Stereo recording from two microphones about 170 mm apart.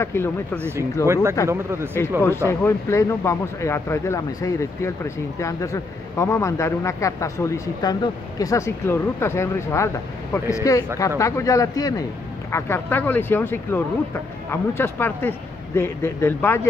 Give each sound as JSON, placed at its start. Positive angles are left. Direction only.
{"t": 0.0, "sound": "speech", "side_deg": 15}
{"t": 0.6, "sound": "speech", "side_deg": -15}
{"t": 2.6, "sound": "speech", "side_deg": 15}